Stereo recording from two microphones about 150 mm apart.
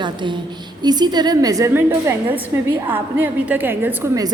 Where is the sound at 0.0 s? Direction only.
30° right (ahead or behind).